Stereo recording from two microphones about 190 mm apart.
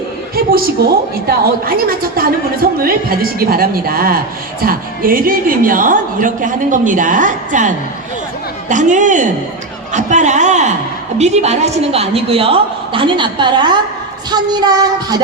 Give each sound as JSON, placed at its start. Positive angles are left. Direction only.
{"t": 0.3, "sound": "a sound", "side_deg": -50}
{"t": 1.3, "sound": "a woman's voice", "side_deg": -50}
{"t": 8.7, "sound": "a woman's voice", "side_deg": -40}